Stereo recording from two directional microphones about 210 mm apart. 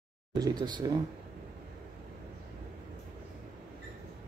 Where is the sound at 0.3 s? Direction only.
20° right (ahead or behind).